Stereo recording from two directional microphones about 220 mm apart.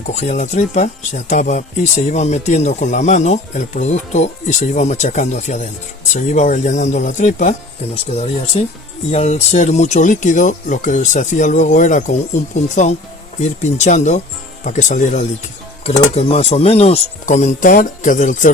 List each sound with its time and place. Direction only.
0.1 s speech: 30° left (ahead or behind)